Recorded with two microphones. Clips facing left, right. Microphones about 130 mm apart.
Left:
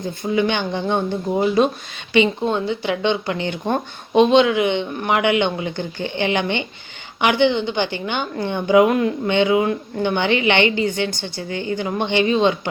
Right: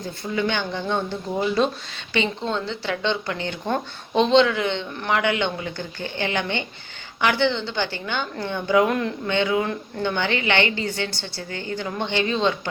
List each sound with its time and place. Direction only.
0.2 s a woman's voice: 15° left (ahead or behind)